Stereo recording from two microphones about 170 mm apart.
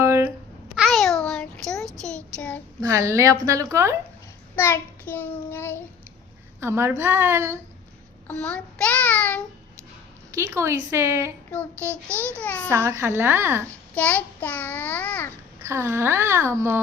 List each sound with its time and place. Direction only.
0.0 s babbling: 15° right (ahead or behind)
0.8 s a sound: centre (ahead or behind)
2.3 s child singing: 10° left (ahead or behind)
2.8 s a child's voice: 15° right (ahead or behind)
4.5 s a child's voice: 15° left (ahead or behind)
6.6 s a child's voice: 15° right (ahead or behind)
8.3 s child singing: 5° left (ahead or behind)
10.3 s a child's voice: 15° right (ahead or behind)
12.4 s a child's voice: 10° left (ahead or behind)
12.7 s a child's voice: 15° right (ahead or behind)
13.9 s a child's voice: 10° left (ahead or behind)
15.6 s a child's voice: 15° right (ahead or behind)